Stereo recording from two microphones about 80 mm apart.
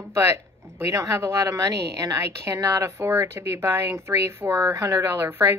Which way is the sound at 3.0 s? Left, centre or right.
Right.